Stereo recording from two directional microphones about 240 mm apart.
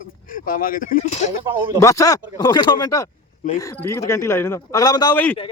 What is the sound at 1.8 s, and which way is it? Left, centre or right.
A man's voice, centre.